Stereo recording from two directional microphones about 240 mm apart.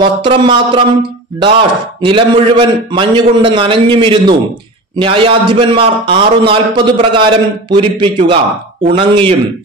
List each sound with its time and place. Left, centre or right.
0.0 s a man's voice: centre
2.0 s a man's voice: right